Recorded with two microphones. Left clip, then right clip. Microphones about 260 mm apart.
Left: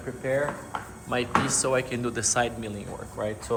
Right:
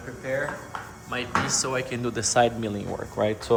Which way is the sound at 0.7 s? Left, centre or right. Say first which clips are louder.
Left 1 dB; left.